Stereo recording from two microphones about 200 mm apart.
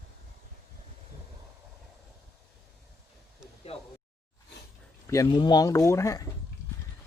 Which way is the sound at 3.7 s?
30° left (ahead or behind).